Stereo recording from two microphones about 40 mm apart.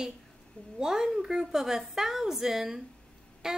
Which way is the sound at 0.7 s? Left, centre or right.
Centre.